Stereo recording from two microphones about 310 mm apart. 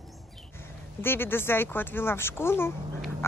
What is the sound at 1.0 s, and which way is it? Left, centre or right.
Speech, centre.